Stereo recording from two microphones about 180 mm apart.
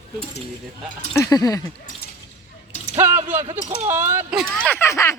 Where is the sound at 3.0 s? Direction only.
10° right (ahead or behind).